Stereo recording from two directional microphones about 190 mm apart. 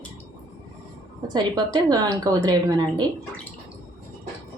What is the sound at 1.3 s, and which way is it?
A woman's voice, 20° right (ahead or behind).